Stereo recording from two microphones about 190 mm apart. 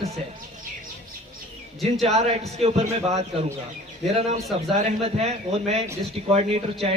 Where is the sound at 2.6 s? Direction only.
35° right (ahead or behind).